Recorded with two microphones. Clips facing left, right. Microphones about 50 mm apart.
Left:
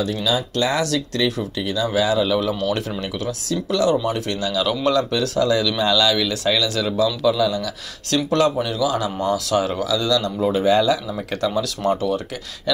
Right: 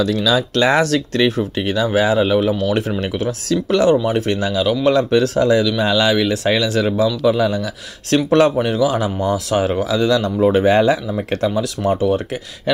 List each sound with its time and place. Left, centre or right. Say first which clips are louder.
0.0 s speech: right 5 dB; right
1.9 s speech: right 3 dB; right
3.0 s speech: right 5 dB; right
4.6 s a man's voice: right 4 dB; centre
4.9 s speech: right 5 dB; right
5.6 s speech: right 3 dB; centre; by 11.0 s right
11.1 s speech: right 3 dB; right